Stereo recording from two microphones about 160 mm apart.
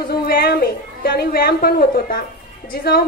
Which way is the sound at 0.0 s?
70° left (ahead or behind).